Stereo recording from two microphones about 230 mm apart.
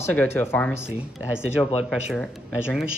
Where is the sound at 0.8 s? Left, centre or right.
Centre.